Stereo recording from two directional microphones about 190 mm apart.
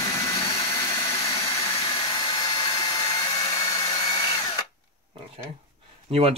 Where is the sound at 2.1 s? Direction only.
25° left (ahead or behind).